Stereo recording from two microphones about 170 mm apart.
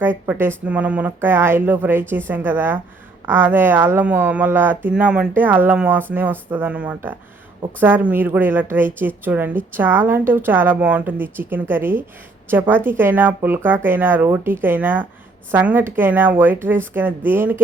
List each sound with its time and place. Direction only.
0.0 s speech: 10° right (ahead or behind)